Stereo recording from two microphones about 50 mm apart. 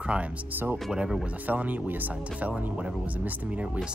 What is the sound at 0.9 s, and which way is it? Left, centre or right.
Speech, centre.